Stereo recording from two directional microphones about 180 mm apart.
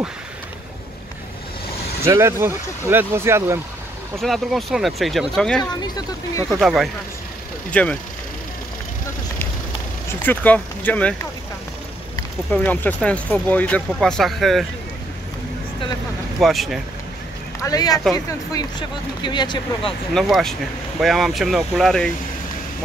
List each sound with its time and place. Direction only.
2.0 s speech: 15° right (ahead or behind)
4.2 s speech: centre (ahead or behind)
5.6 s speech: 20° left (ahead or behind)
6.6 s speech: centre (ahead or behind)
10.1 s speech: 10° left (ahead or behind)
12.6 s speech: 5° left (ahead or behind)
16.3 s speech: centre (ahead or behind)
17.6 s speech: 20° left (ahead or behind)
20.2 s speech: centre (ahead or behind)